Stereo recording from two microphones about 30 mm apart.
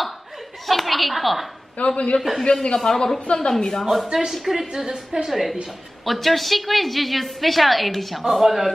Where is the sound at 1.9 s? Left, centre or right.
Left.